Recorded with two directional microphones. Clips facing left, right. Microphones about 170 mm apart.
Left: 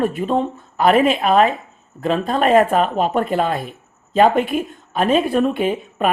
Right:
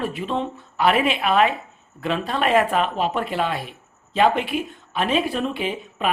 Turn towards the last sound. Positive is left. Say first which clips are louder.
# left 6 dB
turn(degrees=50)  # may be behind; listen again after turning